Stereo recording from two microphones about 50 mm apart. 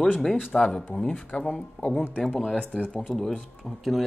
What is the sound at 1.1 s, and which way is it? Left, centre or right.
Speech, left.